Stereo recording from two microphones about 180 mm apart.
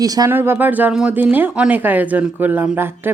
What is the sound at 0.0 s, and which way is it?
Speech, 20° right (ahead or behind).